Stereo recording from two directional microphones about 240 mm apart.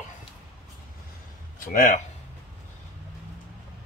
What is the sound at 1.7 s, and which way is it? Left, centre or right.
Speech, left.